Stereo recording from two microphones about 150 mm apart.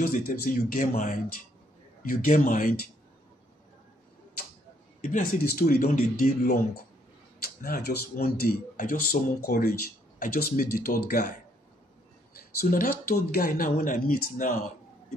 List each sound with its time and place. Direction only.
0.0 s speech: 65° left (ahead or behind)
5.0 s speech: 65° left (ahead or behind)
12.5 s speech: 75° left (ahead or behind)